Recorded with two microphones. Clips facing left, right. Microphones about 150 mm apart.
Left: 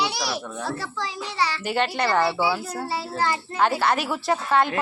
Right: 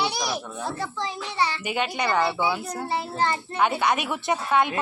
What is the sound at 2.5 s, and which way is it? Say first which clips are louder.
Speech: left 1 dB; 5° left (ahead or behind).